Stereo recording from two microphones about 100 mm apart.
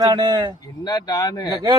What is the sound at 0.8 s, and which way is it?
Speech, 40° left (ahead or behind).